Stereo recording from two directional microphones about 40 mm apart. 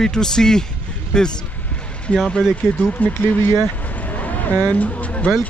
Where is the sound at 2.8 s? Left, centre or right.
Left.